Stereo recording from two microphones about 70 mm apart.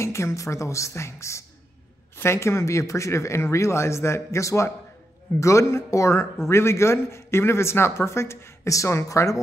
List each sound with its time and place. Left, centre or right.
0.0 s a man's voice: left